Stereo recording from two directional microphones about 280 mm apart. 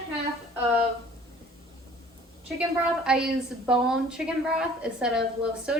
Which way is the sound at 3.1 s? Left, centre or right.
Centre.